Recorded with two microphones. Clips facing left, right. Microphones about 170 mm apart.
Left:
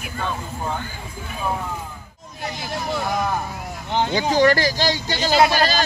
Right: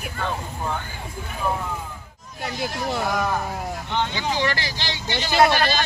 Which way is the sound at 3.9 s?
45° left (ahead or behind).